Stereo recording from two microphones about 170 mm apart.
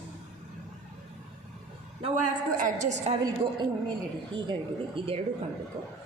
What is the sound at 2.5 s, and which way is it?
Speech, 50° right (ahead or behind).